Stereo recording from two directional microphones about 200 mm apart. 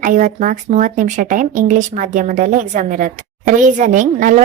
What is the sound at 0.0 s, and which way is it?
Speech, 40° right (ahead or behind).